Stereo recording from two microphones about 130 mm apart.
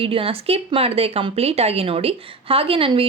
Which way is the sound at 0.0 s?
45° right (ahead or behind).